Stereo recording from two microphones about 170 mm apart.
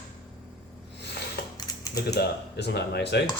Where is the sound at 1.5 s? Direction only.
20° left (ahead or behind).